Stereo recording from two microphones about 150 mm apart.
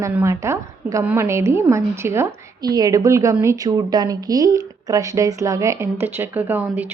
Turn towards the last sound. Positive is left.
turn(degrees=-10)  # may be behind; listen again after turning